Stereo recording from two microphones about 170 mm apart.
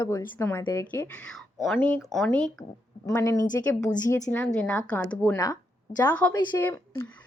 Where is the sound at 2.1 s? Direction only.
5° left (ahead or behind).